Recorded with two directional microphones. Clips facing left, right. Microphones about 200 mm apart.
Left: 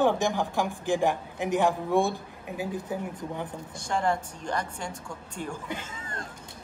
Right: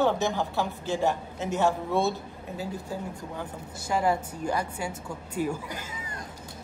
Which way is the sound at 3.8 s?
5° right (ahead or behind).